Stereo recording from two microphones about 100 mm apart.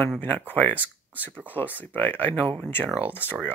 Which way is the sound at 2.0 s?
20° left (ahead or behind).